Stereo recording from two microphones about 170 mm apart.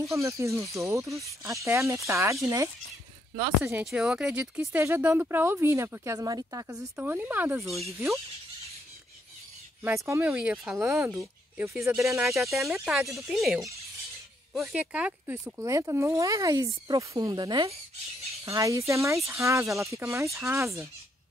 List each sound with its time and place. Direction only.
0.1 s speech: 15° right (ahead or behind)
3.7 s speech: 5° right (ahead or behind)
10.0 s speech: 15° right (ahead or behind)
11.0 s speech: 15° right (ahead or behind)
12.2 s speech: centre (ahead or behind)
14.7 s speech: 5° right (ahead or behind)